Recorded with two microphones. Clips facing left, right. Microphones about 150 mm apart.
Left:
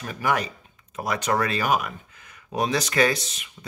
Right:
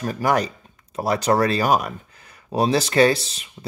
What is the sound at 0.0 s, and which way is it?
Speech, 40° right (ahead or behind).